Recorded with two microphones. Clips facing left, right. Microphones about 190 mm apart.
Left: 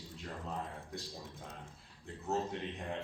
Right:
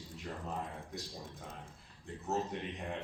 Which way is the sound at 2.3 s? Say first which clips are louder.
Even; centre (ahead or behind).